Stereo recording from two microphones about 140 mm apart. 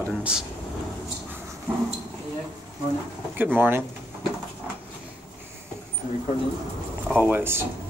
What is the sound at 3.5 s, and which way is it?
Speech, 15° right (ahead or behind).